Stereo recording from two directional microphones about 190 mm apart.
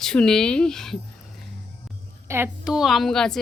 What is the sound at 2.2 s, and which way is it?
Speech, 10° right (ahead or behind).